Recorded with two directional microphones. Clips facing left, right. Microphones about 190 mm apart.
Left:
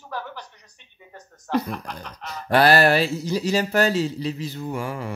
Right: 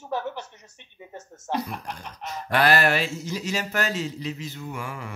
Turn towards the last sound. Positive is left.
turn(degrees=35)  # may be behind; listen again after turning